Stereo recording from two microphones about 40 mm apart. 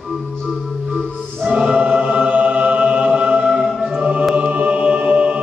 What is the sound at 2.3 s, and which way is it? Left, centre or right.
Music, right.